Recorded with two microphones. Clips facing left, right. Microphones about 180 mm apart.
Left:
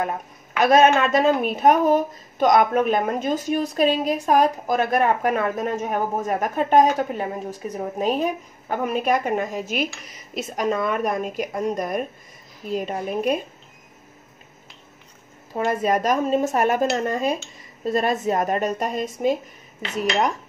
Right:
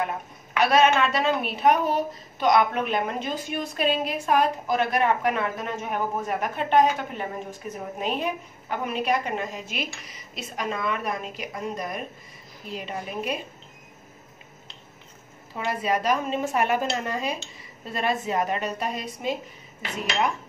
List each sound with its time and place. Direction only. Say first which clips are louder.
0.6 s a woman's voice: left 4 dB; 45° left (ahead or behind)
15.5 s a woman's voice: left 5 dB; 45° left (ahead or behind)